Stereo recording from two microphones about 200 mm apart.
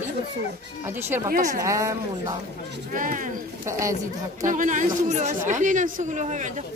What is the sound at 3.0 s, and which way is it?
Speech, 40° right (ahead or behind).